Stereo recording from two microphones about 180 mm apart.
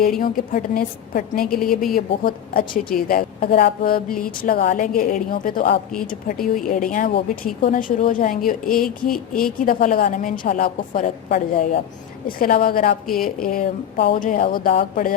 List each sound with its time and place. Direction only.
0.2 s a woman's voice: 50° left (ahead or behind)
1.5 s speech: centre (ahead or behind)
2.0 s a woman's voice: 55° left (ahead or behind)
14.2 s a woman's voice: 50° left (ahead or behind)